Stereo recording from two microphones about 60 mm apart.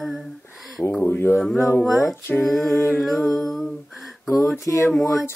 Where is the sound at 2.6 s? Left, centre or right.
Left.